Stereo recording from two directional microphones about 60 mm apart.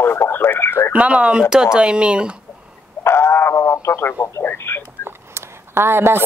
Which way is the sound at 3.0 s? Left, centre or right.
Left.